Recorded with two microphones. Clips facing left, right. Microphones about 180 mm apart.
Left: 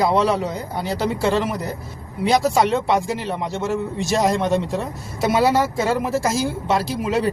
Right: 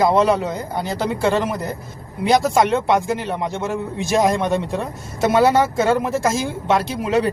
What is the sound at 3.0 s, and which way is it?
Speech, 55° right (ahead or behind).